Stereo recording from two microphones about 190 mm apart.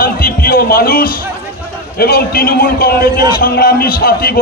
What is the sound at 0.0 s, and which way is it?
Music, 50° left (ahead or behind).